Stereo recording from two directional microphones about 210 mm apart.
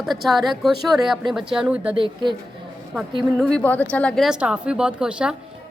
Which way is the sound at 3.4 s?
5° left (ahead or behind).